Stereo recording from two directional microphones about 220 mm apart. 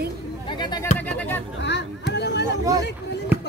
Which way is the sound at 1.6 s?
50° left (ahead or behind).